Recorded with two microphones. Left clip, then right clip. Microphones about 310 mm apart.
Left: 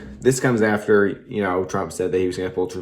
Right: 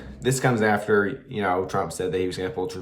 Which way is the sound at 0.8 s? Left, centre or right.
Right.